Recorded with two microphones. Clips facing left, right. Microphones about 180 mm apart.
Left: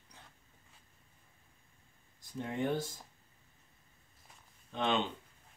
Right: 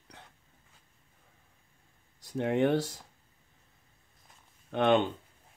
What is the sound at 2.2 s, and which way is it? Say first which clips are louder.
Speech: right 9 dB; 70° right (ahead or behind).